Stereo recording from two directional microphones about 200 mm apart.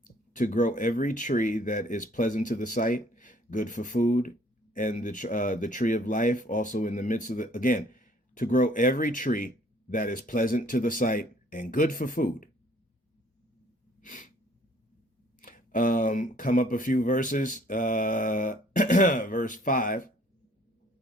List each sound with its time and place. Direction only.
0.0 s speech: 40° left (ahead or behind)
14.0 s sneeze: 40° left (ahead or behind)
15.4 s speech: 45° left (ahead or behind)